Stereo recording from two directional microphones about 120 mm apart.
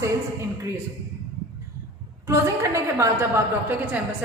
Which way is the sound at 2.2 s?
25° right (ahead or behind).